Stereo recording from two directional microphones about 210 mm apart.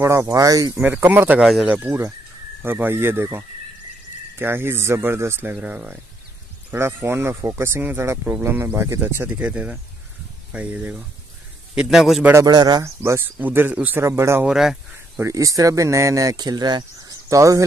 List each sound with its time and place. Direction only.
0.0 s a man's voice: 15° right (ahead or behind)
15.2 s a man's voice: 15° right (ahead or behind)